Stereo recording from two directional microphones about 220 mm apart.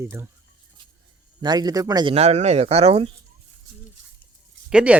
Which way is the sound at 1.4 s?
20° right (ahead or behind).